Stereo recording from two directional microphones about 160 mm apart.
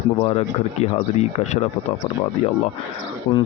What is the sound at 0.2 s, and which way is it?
Speech, 40° left (ahead or behind).